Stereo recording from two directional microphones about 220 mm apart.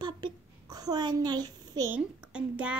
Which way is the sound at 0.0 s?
20° right (ahead or behind).